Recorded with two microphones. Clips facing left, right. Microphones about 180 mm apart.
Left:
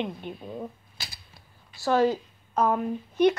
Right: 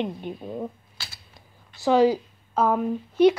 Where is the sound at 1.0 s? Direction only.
15° left (ahead or behind).